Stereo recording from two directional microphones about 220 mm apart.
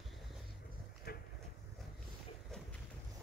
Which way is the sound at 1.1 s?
45° left (ahead or behind).